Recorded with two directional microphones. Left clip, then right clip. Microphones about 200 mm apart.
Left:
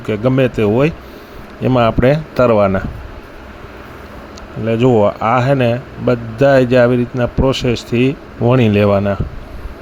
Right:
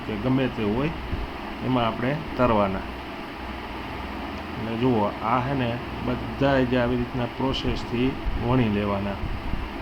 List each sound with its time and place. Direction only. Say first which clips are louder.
0.1 s speech: left 12 dB; 45° left (ahead or behind)
4.8 s speech: left 12 dB; 50° left (ahead or behind)